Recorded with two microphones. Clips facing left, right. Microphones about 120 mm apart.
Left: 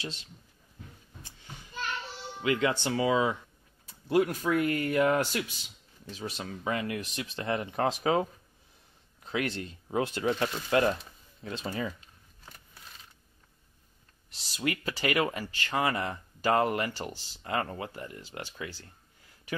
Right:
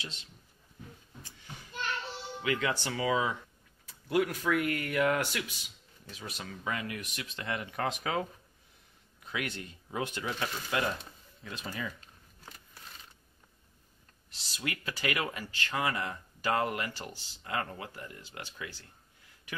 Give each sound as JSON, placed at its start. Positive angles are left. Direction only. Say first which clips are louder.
{"t": 2.4, "sound": "speech", "louder": "left 4 dB", "side_deg": 25}
{"t": 14.6, "sound": "speech", "louder": "left 5 dB", "side_deg": 30}